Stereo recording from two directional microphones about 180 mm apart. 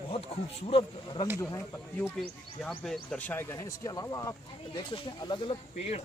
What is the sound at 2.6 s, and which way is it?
Speech, centre (ahead or behind).